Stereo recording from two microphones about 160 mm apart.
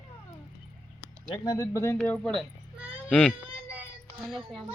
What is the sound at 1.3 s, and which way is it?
Speech, 20° left (ahead or behind).